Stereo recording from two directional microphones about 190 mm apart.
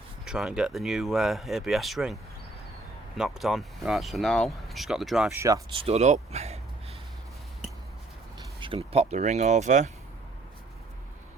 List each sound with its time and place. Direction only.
0.3 s speech: 5° right (ahead or behind)
3.2 s speech: centre (ahead or behind)
5.4 s speech: 15° right (ahead or behind)
5.7 s speech: 30° right (ahead or behind)
8.6 s speech: 30° right (ahead or behind)